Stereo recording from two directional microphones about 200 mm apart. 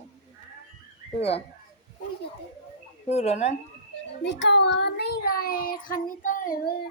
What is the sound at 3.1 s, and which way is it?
Speech, 35° left (ahead or behind).